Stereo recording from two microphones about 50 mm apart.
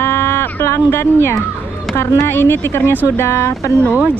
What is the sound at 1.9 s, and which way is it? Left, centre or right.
Speech, left.